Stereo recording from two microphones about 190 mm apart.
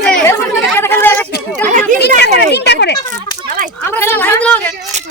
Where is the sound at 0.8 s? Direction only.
10° left (ahead or behind).